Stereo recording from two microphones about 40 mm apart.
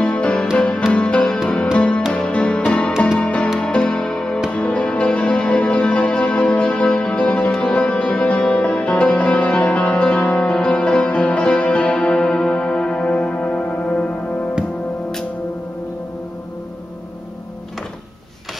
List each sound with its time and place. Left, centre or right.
0.1 s music: left
4.5 s music: left
13.7 s music: left